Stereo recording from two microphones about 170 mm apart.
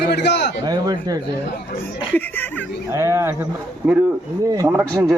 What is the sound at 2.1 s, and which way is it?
Speech, 10° left (ahead or behind).